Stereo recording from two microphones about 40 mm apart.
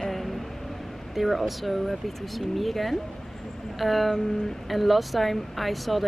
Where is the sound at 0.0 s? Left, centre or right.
Centre.